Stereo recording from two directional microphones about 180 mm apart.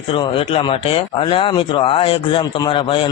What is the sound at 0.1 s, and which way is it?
Speech, 30° left (ahead or behind).